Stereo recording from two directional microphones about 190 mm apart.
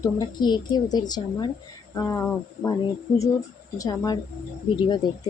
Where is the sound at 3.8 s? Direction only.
20° left (ahead or behind).